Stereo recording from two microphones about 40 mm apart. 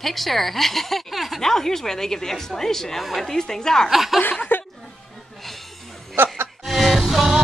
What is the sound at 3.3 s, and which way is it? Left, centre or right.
Speech, centre.